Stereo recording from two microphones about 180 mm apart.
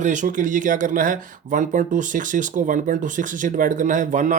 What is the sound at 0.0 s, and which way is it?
Speech, 45° right (ahead or behind).